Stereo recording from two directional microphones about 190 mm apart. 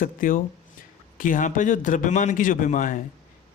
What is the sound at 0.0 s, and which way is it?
A man's voice, 45° left (ahead or behind).